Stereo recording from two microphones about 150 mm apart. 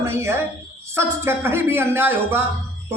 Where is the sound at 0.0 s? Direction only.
15° right (ahead or behind).